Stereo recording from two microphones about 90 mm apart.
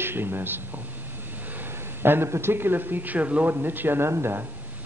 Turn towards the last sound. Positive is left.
turn(degrees=-30)  # may be behind; listen again after turning